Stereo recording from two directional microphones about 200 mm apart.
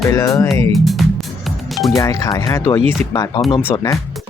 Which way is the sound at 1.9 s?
15° left (ahead or behind).